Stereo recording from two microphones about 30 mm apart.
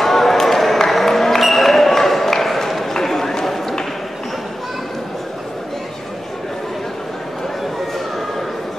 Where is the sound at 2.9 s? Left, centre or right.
Centre.